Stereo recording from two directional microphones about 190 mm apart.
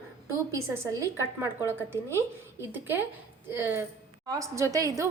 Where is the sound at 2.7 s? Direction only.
10° right (ahead or behind).